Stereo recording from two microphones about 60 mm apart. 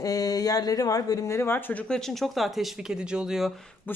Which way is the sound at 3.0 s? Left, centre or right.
Centre.